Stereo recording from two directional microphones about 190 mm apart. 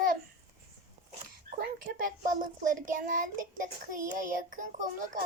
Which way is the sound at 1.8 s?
45° right (ahead or behind).